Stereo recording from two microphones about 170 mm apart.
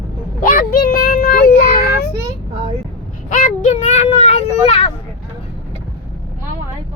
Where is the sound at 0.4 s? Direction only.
60° left (ahead or behind).